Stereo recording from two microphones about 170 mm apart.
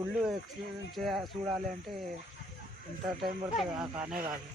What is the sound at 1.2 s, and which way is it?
Speech, 25° right (ahead or behind).